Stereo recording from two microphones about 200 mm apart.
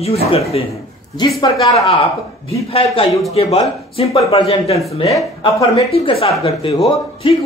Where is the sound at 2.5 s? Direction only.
30° left (ahead or behind).